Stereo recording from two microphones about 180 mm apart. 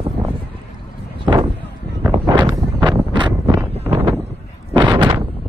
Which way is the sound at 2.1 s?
25° right (ahead or behind).